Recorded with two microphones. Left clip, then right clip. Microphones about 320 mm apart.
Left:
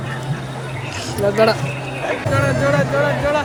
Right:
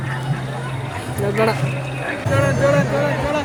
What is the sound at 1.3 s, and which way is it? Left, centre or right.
Speech, centre.